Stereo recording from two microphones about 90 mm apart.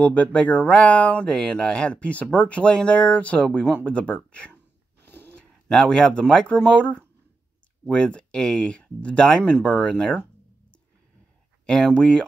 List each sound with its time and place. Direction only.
0.0 s speech: 15° left (ahead or behind)
5.0 s a sound: 25° left (ahead or behind)
5.3 s speech: 10° left (ahead or behind)
11.6 s speech: 10° left (ahead or behind)